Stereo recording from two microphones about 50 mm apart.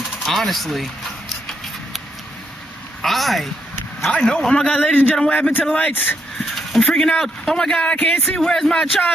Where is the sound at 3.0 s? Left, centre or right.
Centre.